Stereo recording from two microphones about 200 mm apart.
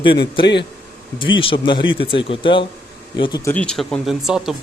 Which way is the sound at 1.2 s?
25° left (ahead or behind).